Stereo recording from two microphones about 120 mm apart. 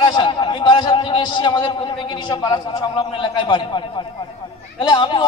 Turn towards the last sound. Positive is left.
turn(degrees=40)  # may be behind; listen again after turning